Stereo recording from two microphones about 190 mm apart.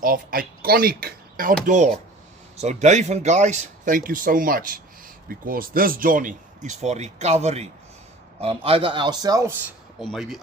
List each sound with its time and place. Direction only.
0.0 s a man's voice: 50° right (ahead or behind); by 9.5 s 20° right (ahead or behind)
10.0 s speech: centre (ahead or behind)